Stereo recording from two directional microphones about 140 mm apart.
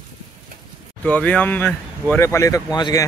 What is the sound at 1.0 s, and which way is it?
Speech, 10° left (ahead or behind).